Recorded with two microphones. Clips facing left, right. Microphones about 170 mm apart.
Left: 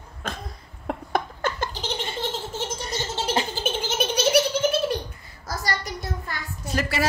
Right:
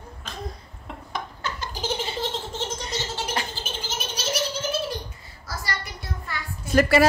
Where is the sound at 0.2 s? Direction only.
55° left (ahead or behind).